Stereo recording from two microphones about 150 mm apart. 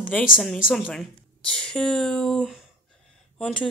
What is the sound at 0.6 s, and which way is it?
Speech, centre (ahead or behind).